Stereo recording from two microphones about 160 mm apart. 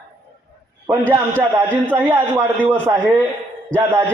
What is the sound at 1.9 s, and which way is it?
Speech, 10° right (ahead or behind).